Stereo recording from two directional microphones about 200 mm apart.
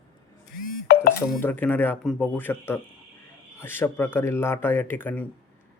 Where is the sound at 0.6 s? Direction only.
50° left (ahead or behind).